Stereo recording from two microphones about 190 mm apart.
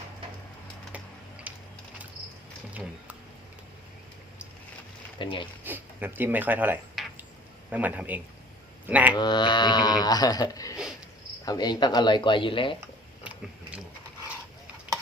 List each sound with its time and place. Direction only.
1.5 s mechanisms: 5° right (ahead or behind)
5.2 s speech: 25° left (ahead or behind)
5.6 s a man's voice: 10° right (ahead or behind)
9.1 s speech: 20° left (ahead or behind)
12.8 s a sound: 5° right (ahead or behind)